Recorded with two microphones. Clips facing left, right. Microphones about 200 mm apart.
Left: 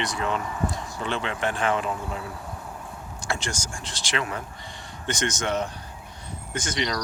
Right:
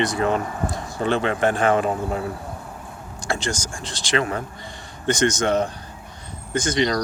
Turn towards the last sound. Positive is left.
turn(degrees=5)  # may be behind; listen again after turning